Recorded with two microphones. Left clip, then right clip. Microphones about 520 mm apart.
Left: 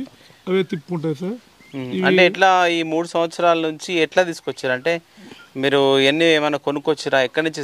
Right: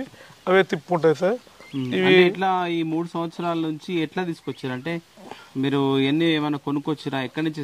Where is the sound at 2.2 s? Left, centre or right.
Left.